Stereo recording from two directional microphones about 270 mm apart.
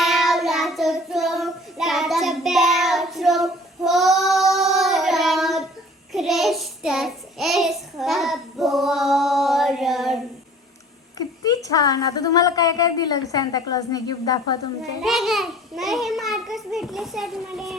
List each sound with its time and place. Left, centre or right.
0.0 s child singing: centre
11.2 s a woman's voice: centre
15.0 s a child's voice: centre